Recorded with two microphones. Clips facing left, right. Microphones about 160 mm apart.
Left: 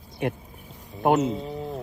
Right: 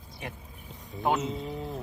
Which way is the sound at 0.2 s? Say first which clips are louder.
Left 13 dB; 60° left (ahead or behind).